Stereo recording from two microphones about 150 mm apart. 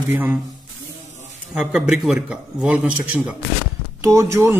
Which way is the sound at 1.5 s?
5° right (ahead or behind).